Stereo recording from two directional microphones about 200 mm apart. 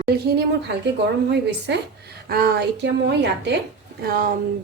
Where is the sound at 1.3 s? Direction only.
60° right (ahead or behind).